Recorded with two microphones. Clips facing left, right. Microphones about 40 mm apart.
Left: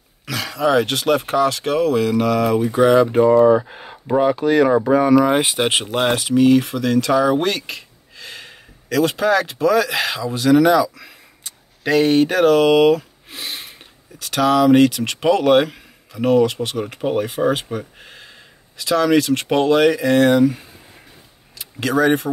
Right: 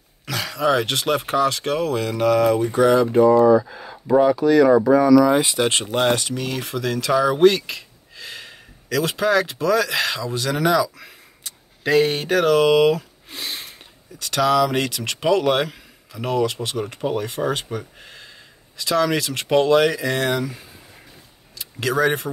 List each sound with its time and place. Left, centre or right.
0.2 s speech: centre
3.0 s speech: left
5.6 s speech: left
5.9 s speech: centre
21.5 s speech: centre